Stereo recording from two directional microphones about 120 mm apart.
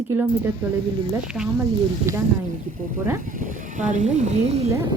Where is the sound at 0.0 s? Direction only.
15° right (ahead or behind).